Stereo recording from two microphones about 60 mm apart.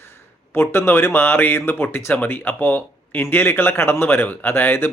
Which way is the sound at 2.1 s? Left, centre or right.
Left.